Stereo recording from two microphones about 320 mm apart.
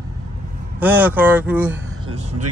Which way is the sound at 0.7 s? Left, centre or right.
Centre.